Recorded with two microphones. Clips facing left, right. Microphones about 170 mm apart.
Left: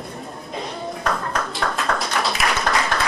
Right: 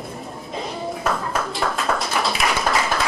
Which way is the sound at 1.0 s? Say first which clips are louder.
Even; 5° right (ahead or behind).